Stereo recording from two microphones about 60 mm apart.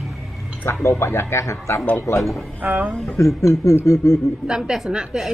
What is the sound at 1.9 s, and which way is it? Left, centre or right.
Chuckle, left.